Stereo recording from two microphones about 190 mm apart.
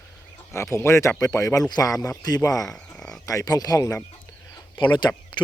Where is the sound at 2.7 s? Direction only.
5° left (ahead or behind).